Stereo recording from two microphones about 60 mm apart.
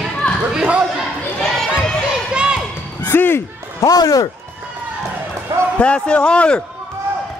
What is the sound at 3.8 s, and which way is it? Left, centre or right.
Speech, left.